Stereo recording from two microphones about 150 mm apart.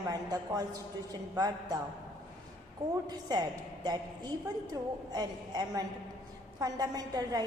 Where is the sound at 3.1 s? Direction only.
25° right (ahead or behind).